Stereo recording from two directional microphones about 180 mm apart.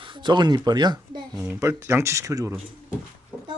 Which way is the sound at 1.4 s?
15° right (ahead or behind).